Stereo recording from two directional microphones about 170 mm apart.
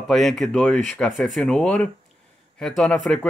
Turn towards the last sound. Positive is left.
turn(degrees=0)  # may be behind; listen again after turning